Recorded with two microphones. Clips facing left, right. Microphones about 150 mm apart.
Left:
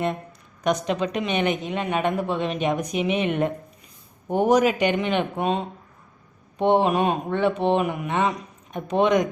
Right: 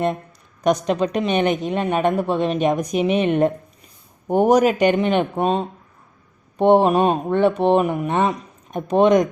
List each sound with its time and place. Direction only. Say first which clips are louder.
0.6 s a woman's voice: right 5 dB; 40° right (ahead or behind)
6.6 s a woman's voice: right 5 dB; 45° right (ahead or behind)